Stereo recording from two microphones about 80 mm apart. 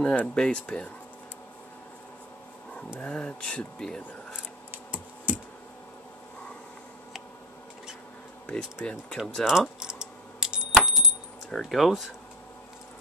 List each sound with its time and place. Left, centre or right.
0.0 s speech: centre
3.0 s speech: centre
4.9 s computer keyboard: centre
8.5 s speech: centre
9.4 s typing: centre
11.5 s speech: centre